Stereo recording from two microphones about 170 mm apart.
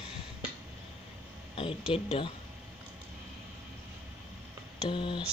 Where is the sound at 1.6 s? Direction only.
30° left (ahead or behind).